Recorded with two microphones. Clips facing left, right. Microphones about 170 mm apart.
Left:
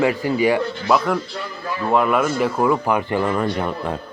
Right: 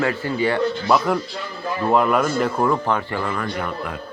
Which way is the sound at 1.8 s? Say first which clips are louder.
Even; centre (ahead or behind).